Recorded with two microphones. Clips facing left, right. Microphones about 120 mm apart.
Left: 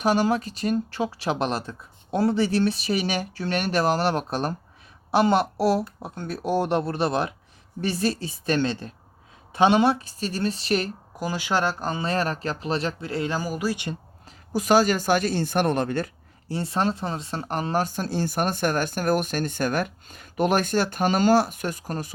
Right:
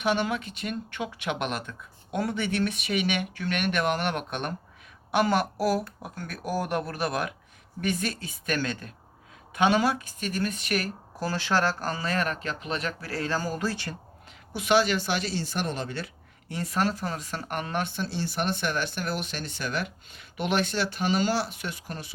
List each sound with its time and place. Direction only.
0.0 s speech: 40° left (ahead or behind)
11.2 s speech: 15° left (ahead or behind)
14.3 s speech: 40° left (ahead or behind)
16.5 s speech: 30° left (ahead or behind)